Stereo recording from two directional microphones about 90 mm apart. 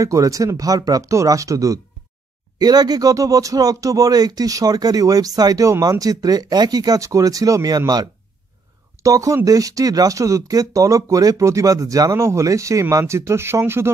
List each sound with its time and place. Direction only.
0.0 s speech: 40° right (ahead or behind)